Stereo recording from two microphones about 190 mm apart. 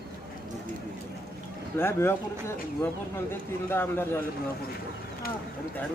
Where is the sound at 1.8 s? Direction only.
10° left (ahead or behind).